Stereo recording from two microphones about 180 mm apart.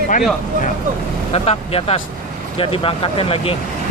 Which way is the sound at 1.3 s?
35° left (ahead or behind).